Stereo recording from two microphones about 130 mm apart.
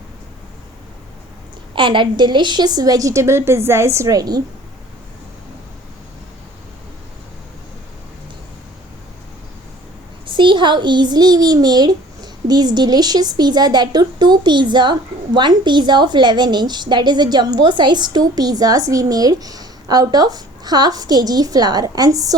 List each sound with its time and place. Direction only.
1.7 s a woman's voice: 40° right (ahead or behind)
10.2 s a child's voice: 40° right (ahead or behind)